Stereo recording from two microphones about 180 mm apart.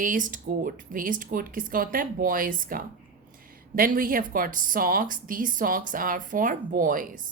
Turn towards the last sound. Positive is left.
turn(degrees=-50)  # may be behind; listen again after turning